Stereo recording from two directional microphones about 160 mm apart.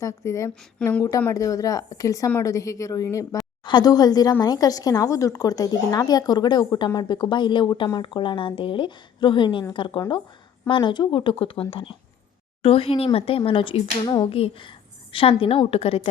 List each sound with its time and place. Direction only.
0.0 s speech: 20° left (ahead or behind); by 16.0 s 35° left (ahead or behind)